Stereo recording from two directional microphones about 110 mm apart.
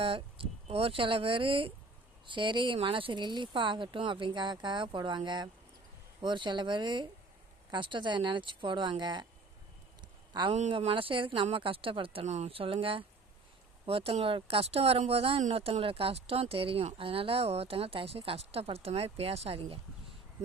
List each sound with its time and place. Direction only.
0.0 s speech: 55° right (ahead or behind)
10.0 s a sound: 45° right (ahead or behind)
10.7 s speech: 55° right (ahead or behind)
12.2 s speech: 85° right; by 20.1 s 60° right (ahead or behind)